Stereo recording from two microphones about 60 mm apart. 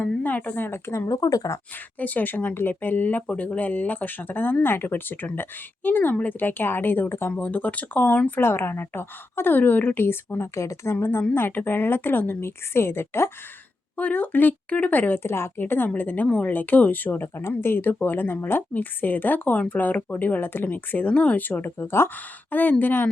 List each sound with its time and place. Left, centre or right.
0.2 s speech: left
0.7 s speech: left
1.0 s speech: left
2.0 s speech: left
8.4 s speech: left
10.5 s speech: left
11.0 s speech: left
13.9 s speech: left
15.2 s speech: left
21.6 s speech: left